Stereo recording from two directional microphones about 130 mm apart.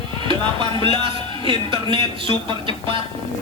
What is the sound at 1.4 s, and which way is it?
Speech, 40° right (ahead or behind).